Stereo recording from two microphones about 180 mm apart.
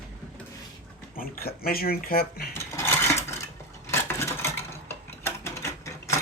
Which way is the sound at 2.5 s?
15° left (ahead or behind).